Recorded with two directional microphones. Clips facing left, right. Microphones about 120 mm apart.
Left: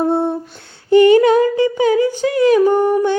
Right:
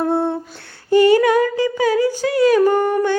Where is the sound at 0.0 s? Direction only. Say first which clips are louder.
Left 2 dB; 20° left (ahead or behind).